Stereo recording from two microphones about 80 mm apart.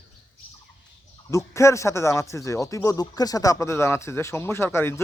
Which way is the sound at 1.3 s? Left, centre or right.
Left.